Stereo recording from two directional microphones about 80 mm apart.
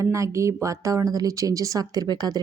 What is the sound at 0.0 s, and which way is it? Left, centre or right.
Speech, right.